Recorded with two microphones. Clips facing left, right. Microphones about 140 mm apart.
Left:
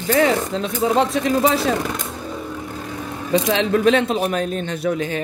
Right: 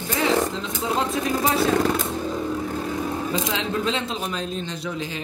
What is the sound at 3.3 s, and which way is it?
Speech, 70° left (ahead or behind).